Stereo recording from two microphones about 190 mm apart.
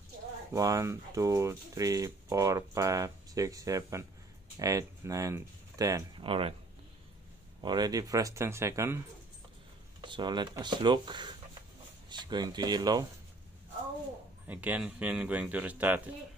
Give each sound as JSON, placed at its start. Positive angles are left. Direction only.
{"t": 0.5, "sound": "speech", "side_deg": -15}
{"t": 6.2, "sound": "speech", "side_deg": -30}
{"t": 7.6, "sound": "speech", "side_deg": -20}
{"t": 10.0, "sound": "speech", "side_deg": -25}
{"t": 14.5, "sound": "speech", "side_deg": -10}